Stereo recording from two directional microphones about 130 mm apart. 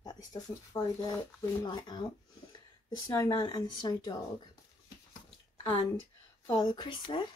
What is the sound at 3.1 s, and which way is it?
Speech, 30° left (ahead or behind).